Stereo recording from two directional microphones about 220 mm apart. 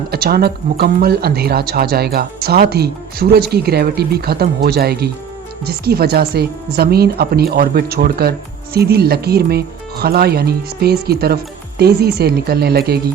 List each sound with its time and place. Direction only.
0.1 s speech: 45° right (ahead or behind)